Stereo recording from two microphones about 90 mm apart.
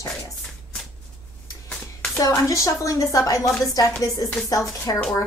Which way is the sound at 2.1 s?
35° left (ahead or behind).